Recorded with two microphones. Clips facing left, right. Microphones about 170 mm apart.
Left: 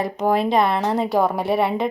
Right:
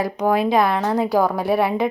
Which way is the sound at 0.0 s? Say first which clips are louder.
Right 1 dB; centre (ahead or behind).